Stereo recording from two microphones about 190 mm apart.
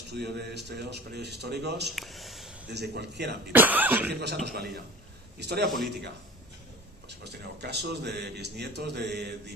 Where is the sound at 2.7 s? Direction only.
60° right (ahead or behind).